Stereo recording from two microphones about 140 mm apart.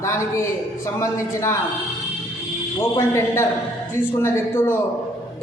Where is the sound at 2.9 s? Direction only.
20° left (ahead or behind).